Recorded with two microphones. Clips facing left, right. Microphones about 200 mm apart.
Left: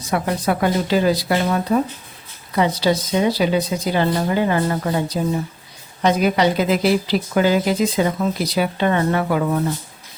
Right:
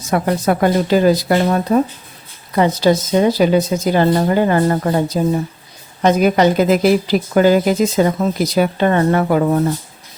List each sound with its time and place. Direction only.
0.1 s speech: 45° right (ahead or behind)